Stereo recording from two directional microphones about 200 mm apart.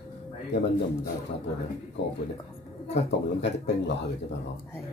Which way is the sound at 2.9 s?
60° left (ahead or behind).